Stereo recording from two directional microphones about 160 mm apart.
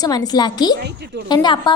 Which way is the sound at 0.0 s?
25° left (ahead or behind).